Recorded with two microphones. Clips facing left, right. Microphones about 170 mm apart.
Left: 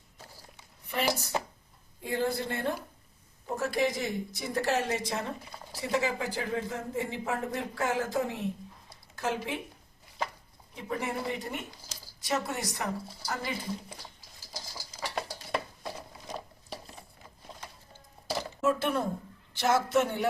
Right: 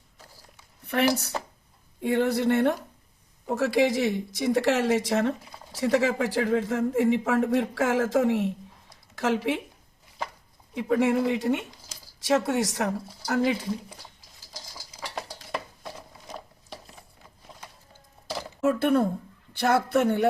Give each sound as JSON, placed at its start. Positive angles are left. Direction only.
{"t": 0.9, "sound": "a woman's voice", "side_deg": -65}
{"t": 3.4, "sound": "a man's voice", "side_deg": -85}
{"t": 10.8, "sound": "a man's voice", "side_deg": -90}
{"t": 14.5, "sound": "a sound", "side_deg": 5}
{"t": 18.6, "sound": "a woman's voice", "side_deg": -60}